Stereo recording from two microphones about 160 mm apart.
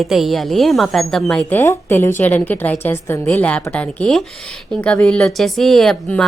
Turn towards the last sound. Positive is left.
turn(degrees=5)  # may be behind; listen again after turning